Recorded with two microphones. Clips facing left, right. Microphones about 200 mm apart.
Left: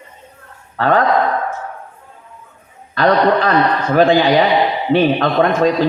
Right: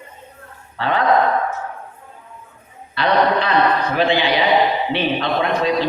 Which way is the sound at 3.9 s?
45° left (ahead or behind).